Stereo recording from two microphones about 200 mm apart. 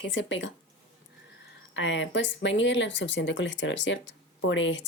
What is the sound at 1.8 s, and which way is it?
A woman's voice, 65° left (ahead or behind).